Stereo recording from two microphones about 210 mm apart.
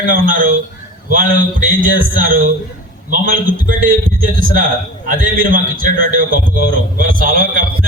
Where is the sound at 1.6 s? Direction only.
40° right (ahead or behind).